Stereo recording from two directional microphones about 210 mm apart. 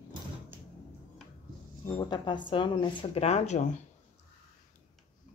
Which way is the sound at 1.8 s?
20° left (ahead or behind).